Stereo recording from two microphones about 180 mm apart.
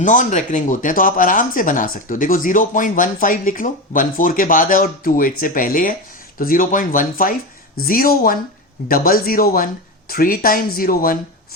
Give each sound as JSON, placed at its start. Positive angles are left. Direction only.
{"t": 0.0, "sound": "speech", "side_deg": 45}